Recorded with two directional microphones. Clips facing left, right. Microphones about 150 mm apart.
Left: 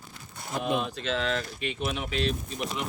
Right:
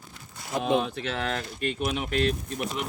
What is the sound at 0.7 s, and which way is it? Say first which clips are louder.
Speech: right 2 dB; 65° right (ahead or behind).